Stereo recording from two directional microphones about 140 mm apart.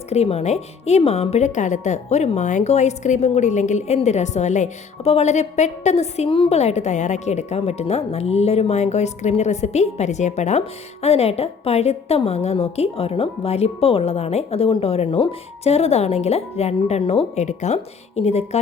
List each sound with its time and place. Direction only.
0.1 s speech: 50° left (ahead or behind)